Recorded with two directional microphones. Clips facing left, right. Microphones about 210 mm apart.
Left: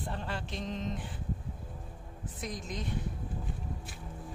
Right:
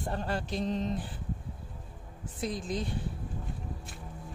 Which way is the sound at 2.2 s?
30° right (ahead or behind).